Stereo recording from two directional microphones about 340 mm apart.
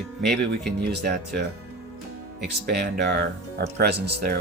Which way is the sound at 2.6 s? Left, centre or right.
Right.